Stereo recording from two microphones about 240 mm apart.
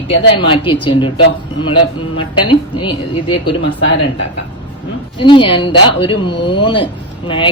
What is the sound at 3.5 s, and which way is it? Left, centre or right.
Speech, left.